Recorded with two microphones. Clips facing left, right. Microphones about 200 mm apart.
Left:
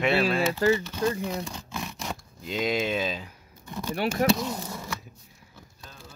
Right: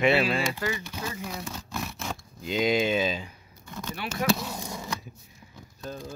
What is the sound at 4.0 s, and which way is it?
Speech, 50° left (ahead or behind).